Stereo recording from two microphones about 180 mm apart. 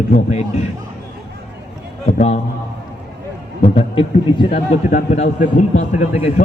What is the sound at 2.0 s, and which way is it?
Speech, 35° left (ahead or behind).